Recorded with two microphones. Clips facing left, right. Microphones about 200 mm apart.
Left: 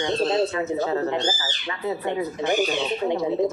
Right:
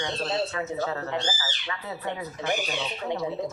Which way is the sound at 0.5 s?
25° left (ahead or behind).